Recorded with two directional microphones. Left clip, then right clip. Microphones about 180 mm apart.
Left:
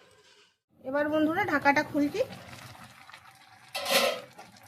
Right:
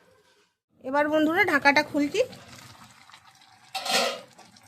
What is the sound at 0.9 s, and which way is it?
A woman's voice, 65° right (ahead or behind).